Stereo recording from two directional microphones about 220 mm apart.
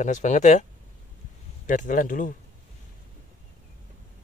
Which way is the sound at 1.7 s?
35° left (ahead or behind).